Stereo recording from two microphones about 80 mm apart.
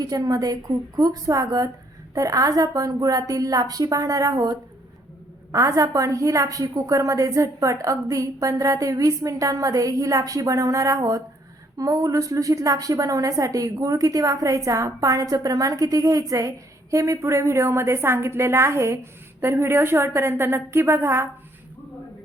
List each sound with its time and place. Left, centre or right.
0.0 s a woman's voice: right